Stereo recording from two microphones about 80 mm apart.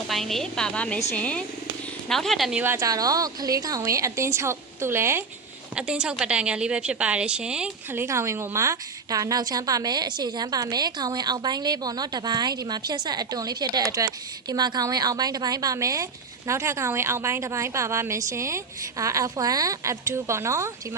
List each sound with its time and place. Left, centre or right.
0.1 s a woman's voice: centre
2.0 s speech: centre
2.7 s a woman's voice: right
5.7 s a woman's voice: centre
7.9 s a woman's voice: right